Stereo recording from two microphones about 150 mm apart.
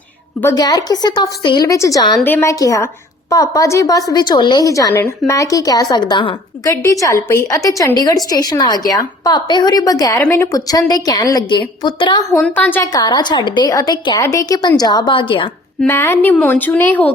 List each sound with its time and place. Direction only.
0.5 s a woman's voice: 25° left (ahead or behind)
6.7 s a woman's voice: 20° left (ahead or behind)
12.5 s a woman's voice: 10° left (ahead or behind)
12.9 s a woman's voice: 25° left (ahead or behind)
15.9 s a woman's voice: 15° left (ahead or behind)